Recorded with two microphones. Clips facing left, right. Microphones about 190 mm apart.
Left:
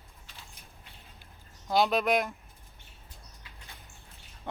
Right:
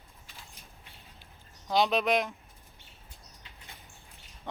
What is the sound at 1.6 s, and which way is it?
Speech, 5° left (ahead or behind).